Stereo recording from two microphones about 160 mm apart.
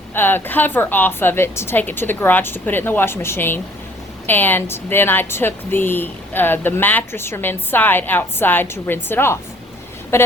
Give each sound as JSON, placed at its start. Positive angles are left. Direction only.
{"t": 0.1, "sound": "speech", "side_deg": 15}